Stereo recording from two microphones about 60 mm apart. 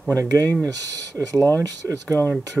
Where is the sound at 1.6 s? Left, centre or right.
Right.